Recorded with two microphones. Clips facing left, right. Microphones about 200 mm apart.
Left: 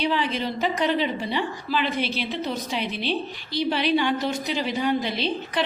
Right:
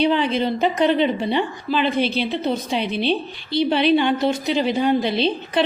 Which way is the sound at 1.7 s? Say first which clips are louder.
Right 6 dB; 25° right (ahead or behind).